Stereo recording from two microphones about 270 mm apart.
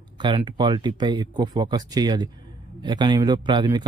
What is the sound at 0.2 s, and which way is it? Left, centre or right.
A man's voice, centre.